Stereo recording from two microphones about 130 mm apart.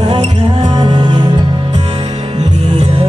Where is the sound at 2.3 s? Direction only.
50° right (ahead or behind).